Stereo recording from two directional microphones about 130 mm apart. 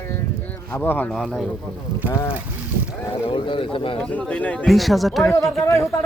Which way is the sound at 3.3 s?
40° left (ahead or behind).